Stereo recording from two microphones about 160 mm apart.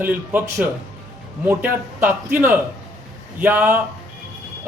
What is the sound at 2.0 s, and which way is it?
Speech, 15° right (ahead or behind).